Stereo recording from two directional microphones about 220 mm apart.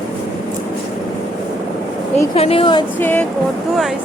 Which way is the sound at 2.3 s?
25° left (ahead or behind).